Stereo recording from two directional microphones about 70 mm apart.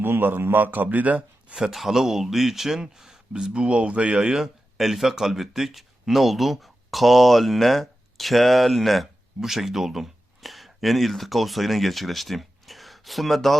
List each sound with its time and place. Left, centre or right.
0.0 s a man's voice: right
1.5 s speech: centre